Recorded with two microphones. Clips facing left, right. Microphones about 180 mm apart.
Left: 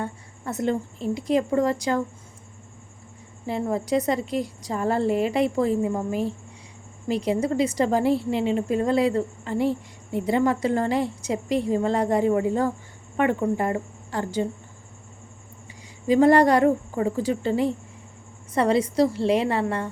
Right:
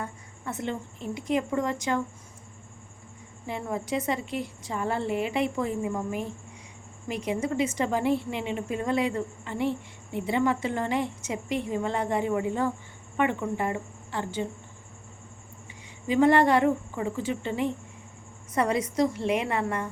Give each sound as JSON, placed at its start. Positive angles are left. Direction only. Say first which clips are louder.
{"t": 0.0, "sound": "a woman's voice", "louder": "left 5 dB", "side_deg": 40}
{"t": 3.4, "sound": "a woman's voice", "louder": "left 6 dB", "side_deg": 35}
{"t": 16.0, "sound": "a woman's voice", "louder": "left 4 dB", "side_deg": 40}